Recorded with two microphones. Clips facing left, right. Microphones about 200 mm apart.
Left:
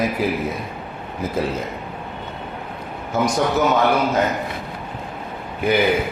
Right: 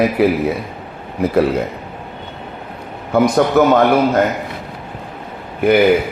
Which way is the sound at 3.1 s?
60° right (ahead or behind).